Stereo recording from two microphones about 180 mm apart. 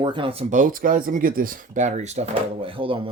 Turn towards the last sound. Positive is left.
turn(degrees=-30)  # may be behind; listen again after turning